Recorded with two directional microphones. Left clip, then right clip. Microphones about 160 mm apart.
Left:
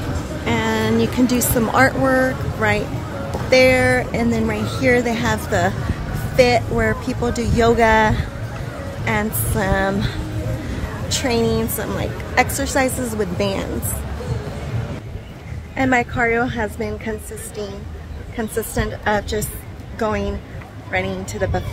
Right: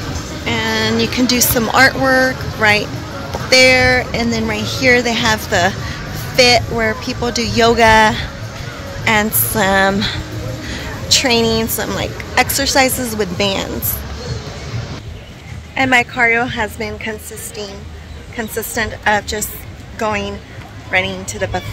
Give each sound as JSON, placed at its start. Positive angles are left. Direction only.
{"t": 0.5, "sound": "speech", "side_deg": 10}
{"t": 3.4, "sound": "a woman's voice", "side_deg": 0}
{"t": 9.0, "sound": "a woman's voice", "side_deg": -20}
{"t": 15.7, "sound": "a woman's voice", "side_deg": 5}
{"t": 18.3, "sound": "a woman's voice", "side_deg": 10}
{"t": 21.4, "sound": "a woman's voice", "side_deg": 5}